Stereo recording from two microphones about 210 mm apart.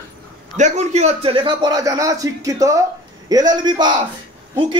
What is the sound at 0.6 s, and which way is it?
A man's voice, 35° right (ahead or behind).